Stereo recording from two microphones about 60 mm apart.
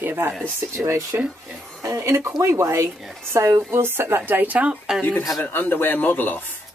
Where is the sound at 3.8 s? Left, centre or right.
Right.